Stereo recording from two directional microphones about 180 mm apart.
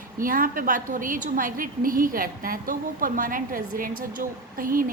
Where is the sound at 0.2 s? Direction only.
50° right (ahead or behind).